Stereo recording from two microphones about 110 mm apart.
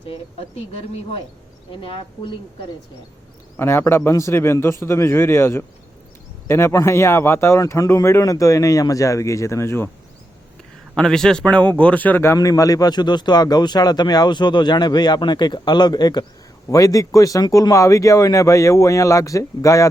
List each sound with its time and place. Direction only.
1.9 s speech: 50° left (ahead or behind)
3.6 s speech: 20° left (ahead or behind)
10.9 s a man's voice: 5° left (ahead or behind); by 19.9 s 30° left (ahead or behind)